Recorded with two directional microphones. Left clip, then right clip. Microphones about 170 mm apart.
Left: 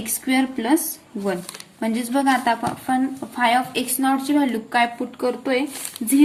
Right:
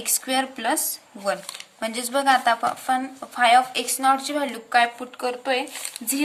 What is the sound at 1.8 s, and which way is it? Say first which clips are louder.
A woman's voice: left 2 dB; 30° right (ahead or behind).